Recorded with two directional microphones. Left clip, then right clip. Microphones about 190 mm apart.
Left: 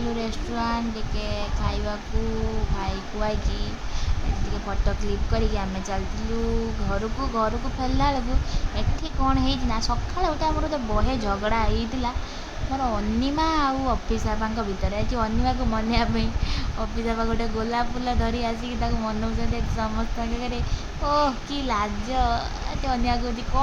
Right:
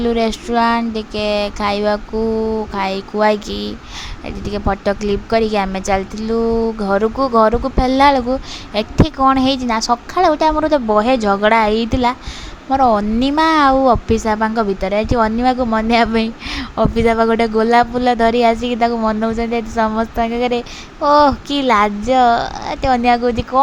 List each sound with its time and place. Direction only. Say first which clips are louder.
0.2 s a woman's voice: right 13 dB; 45° right (ahead or behind)
4.9 s a woman's voice: right 14 dB; 45° right (ahead or behind)